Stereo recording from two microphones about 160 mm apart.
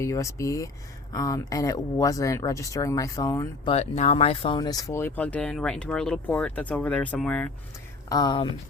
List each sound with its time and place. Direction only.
0.0 s speech: 20° left (ahead or behind)
3.7 s speech: 45° left (ahead or behind); by 7.5 s 5° left (ahead or behind)
8.1 s speech: 25° left (ahead or behind)